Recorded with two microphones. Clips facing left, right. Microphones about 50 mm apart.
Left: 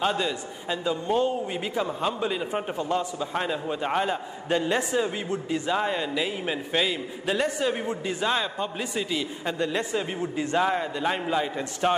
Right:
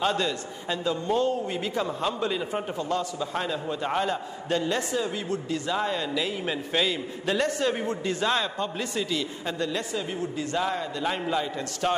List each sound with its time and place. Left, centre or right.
0.0 s a man's voice: centre